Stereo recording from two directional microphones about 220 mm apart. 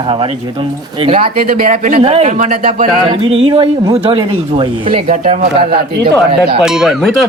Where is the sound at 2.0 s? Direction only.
25° right (ahead or behind).